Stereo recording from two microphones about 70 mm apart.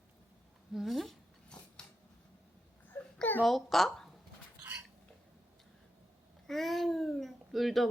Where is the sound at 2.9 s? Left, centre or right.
Left.